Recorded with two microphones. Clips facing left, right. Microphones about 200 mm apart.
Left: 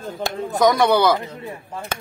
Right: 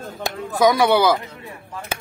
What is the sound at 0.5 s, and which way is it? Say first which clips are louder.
Speech: even; 5° right (ahead or behind).